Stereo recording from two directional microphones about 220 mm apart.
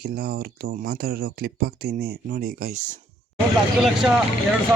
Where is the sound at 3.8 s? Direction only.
5° right (ahead or behind).